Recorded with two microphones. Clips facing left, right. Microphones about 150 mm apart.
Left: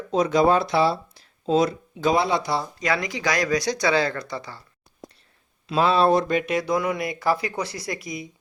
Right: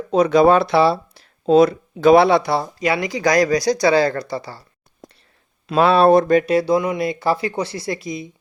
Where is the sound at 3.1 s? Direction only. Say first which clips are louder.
Right 7 dB; 40° right (ahead or behind).